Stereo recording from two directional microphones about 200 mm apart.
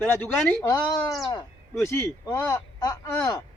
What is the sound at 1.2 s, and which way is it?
A man's voice, 20° left (ahead or behind).